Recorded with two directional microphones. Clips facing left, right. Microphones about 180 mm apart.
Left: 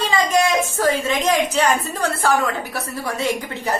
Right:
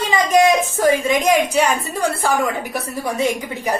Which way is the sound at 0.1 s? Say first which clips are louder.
Right 5 dB; 20° right (ahead or behind).